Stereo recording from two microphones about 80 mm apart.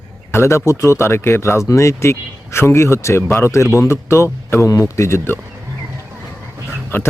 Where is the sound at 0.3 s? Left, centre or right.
Left.